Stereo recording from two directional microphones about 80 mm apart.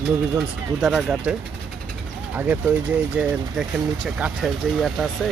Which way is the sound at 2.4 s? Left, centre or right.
Right.